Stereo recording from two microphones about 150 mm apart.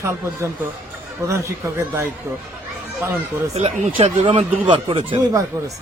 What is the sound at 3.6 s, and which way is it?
Speech, 45° right (ahead or behind).